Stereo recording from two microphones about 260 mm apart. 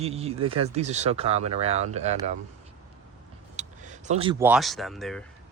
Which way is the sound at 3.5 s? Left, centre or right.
Right.